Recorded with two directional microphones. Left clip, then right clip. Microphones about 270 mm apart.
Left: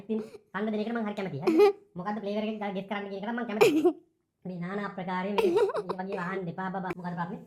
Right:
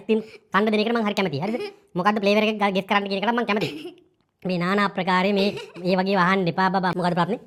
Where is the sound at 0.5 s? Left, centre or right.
Right.